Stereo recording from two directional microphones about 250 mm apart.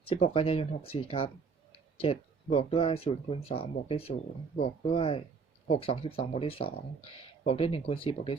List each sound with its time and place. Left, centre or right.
0.1 s speech: left